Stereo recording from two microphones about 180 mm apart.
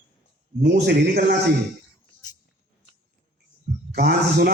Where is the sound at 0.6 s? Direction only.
65° right (ahead or behind).